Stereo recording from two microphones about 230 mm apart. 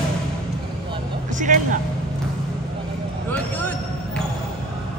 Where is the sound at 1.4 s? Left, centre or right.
Right.